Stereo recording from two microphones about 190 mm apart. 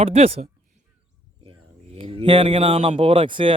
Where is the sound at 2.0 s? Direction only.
25° right (ahead or behind).